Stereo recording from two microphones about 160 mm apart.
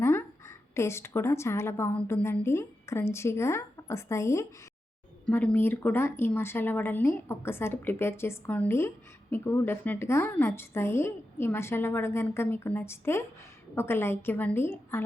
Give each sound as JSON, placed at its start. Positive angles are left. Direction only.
{"t": 0.0, "sound": "a woman's voice", "side_deg": 15}